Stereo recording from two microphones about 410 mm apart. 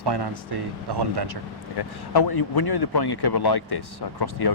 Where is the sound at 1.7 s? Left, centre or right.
Left.